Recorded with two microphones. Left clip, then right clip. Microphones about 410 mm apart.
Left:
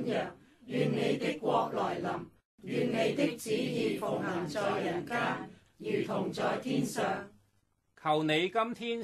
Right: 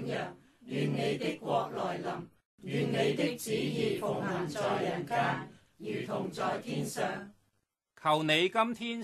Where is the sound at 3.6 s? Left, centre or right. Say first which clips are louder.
Right 2 dB; centre.